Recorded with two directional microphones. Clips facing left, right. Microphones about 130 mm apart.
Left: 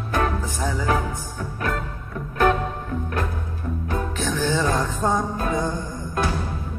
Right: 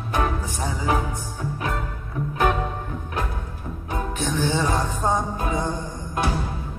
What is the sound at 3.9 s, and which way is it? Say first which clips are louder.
Music: right 1 dB; 20° right (ahead or behind).